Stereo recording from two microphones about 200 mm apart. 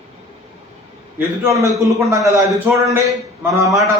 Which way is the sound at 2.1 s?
15° right (ahead or behind).